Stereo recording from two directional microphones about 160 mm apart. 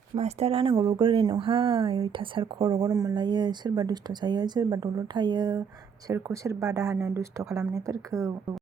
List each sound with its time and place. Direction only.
0.2 s speech: 40° right (ahead or behind)
2.8 s speech: 20° right (ahead or behind)
6.1 s speech: 15° right (ahead or behind)